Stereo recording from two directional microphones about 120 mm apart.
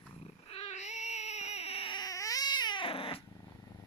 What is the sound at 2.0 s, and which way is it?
Baby cry, 30° left (ahead or behind).